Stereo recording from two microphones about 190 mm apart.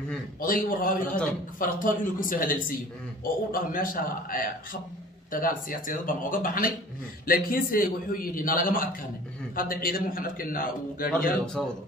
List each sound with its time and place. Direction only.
0.4 s a man's voice: 45° left (ahead or behind)
11.6 s speech: 5° left (ahead or behind)